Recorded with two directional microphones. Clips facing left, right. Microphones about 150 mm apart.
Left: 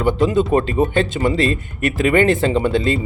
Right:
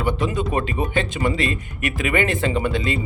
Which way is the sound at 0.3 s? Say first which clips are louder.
Left 7 dB; 35° left (ahead or behind).